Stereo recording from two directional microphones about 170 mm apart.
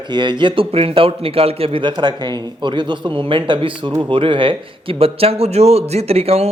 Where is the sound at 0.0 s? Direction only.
25° right (ahead or behind).